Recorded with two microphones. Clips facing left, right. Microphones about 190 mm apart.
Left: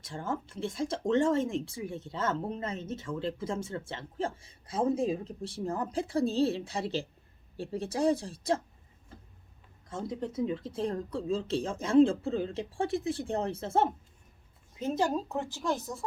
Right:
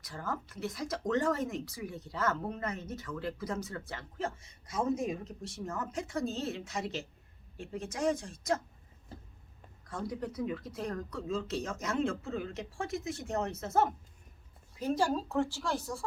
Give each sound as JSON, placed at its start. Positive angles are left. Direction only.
{"t": 0.0, "sound": "speech", "side_deg": 25}
{"t": 9.8, "sound": "speech", "side_deg": 25}